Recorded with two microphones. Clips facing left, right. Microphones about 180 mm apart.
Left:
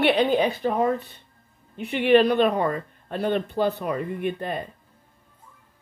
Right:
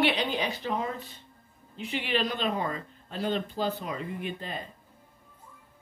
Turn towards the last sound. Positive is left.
turn(degrees=60)  # may be behind; listen again after turning